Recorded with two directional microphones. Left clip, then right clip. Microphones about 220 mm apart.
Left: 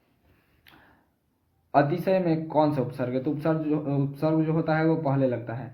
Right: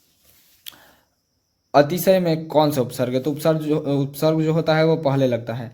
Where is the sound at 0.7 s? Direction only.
55° right (ahead or behind).